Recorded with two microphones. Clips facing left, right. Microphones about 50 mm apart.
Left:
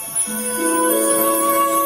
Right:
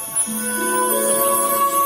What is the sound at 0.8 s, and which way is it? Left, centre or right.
Music, left.